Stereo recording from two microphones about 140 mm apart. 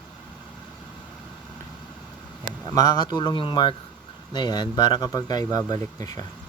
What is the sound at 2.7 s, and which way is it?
Speech, 25° left (ahead or behind).